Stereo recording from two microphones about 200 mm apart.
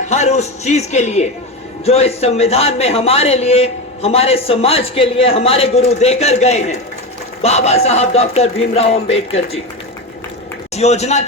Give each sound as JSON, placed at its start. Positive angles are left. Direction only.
{"t": 0.1, "sound": "a man's voice", "side_deg": 35}
{"t": 10.8, "sound": "a man's voice", "side_deg": 35}